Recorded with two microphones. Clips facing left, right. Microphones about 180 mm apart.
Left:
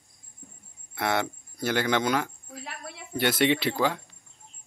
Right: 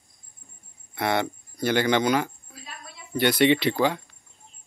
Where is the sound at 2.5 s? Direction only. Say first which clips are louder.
Left 4 dB; 70° left (ahead or behind).